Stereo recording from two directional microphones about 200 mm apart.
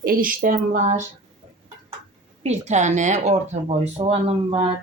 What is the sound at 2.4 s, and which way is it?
Speech, 35° right (ahead or behind).